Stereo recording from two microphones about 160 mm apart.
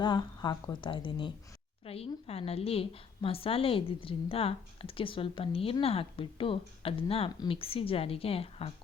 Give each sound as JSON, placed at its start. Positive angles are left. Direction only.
{"t": 0.0, "sound": "a woman's voice", "side_deg": 30}